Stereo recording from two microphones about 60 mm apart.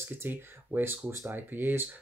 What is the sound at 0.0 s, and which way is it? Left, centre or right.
Speech, right.